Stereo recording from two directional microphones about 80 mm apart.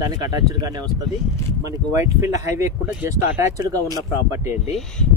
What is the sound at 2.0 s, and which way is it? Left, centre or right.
Speech, right.